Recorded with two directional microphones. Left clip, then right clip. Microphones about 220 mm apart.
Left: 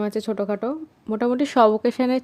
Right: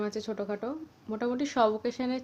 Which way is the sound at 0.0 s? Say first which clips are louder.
Left 9 dB; 45° left (ahead or behind).